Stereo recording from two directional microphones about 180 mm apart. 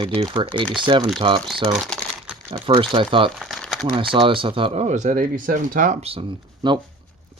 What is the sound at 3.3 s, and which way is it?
Crumpling, centre (ahead or behind).